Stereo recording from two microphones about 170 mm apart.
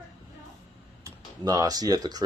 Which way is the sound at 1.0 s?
20° right (ahead or behind).